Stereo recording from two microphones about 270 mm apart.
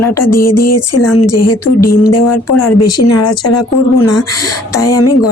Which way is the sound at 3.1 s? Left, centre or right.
Left.